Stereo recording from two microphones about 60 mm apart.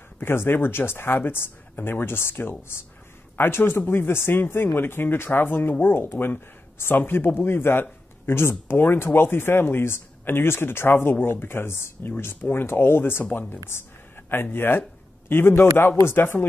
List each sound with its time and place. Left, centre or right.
0.2 s speech: left